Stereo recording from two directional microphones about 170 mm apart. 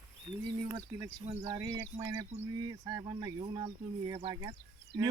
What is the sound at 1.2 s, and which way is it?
Speech, 40° right (ahead or behind).